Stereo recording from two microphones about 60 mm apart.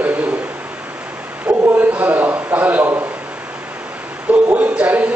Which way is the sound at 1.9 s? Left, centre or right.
Right.